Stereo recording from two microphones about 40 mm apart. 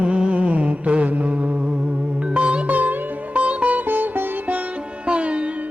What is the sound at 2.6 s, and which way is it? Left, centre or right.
Sitar, right.